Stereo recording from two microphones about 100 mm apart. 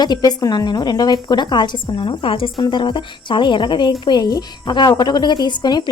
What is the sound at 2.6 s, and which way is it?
A woman's voice, 50° left (ahead or behind).